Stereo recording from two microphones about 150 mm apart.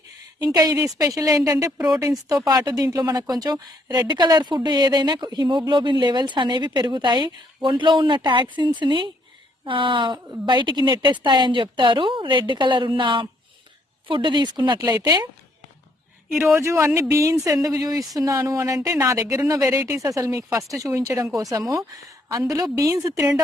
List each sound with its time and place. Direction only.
0.5 s a woman's voice: 25° right (ahead or behind)
16.6 s speech: 15° right (ahead or behind)